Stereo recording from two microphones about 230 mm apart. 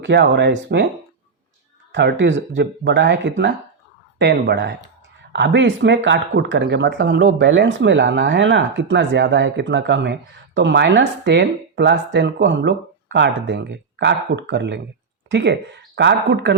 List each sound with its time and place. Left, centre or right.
0.0 s speech: right
1.9 s speech: right